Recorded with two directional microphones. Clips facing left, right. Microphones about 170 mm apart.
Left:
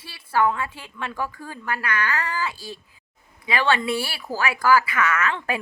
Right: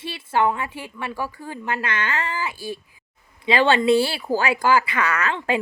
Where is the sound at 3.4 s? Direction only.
30° right (ahead or behind).